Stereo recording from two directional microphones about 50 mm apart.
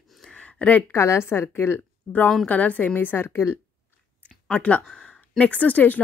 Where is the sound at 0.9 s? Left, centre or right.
Left.